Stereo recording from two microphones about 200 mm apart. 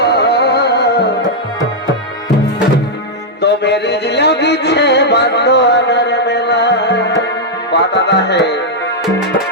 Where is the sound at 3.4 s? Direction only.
55° left (ahead or behind).